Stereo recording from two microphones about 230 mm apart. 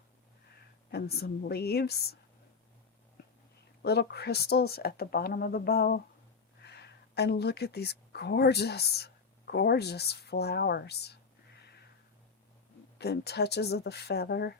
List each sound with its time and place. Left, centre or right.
0.9 s speech: left
3.8 s speech: left
13.0 s speech: left